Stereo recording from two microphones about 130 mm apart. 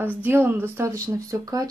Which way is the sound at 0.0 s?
15° right (ahead or behind).